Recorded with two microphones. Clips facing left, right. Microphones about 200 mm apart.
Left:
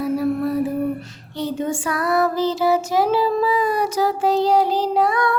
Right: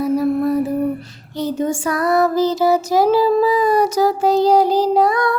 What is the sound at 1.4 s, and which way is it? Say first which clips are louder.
Child singing: right 3 dB; 40° right (ahead or behind).